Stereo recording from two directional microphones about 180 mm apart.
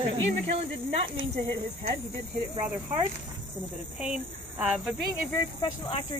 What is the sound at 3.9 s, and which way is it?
Speech, 5° right (ahead or behind).